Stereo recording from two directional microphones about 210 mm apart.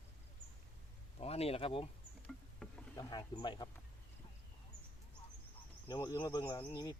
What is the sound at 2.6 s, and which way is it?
Insect, 5° left (ahead or behind).